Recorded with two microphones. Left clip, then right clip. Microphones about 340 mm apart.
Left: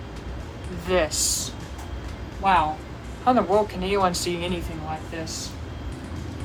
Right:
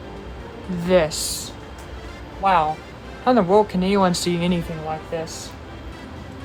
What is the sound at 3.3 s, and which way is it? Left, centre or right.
Speech, right.